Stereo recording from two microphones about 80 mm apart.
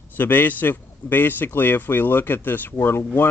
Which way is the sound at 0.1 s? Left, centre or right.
Left.